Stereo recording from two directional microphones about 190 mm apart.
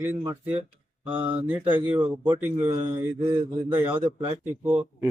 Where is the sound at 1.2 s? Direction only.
30° right (ahead or behind).